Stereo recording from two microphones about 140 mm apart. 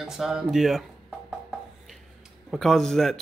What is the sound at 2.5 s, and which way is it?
Speech, centre (ahead or behind).